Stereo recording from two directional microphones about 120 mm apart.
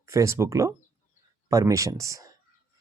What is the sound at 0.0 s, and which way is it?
Speech, 25° right (ahead or behind).